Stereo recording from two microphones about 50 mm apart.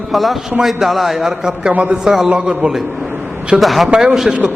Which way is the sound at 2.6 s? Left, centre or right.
Right.